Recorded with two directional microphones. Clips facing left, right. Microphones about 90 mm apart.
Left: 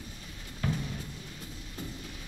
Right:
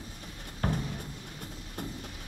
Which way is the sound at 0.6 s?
50° right (ahead or behind).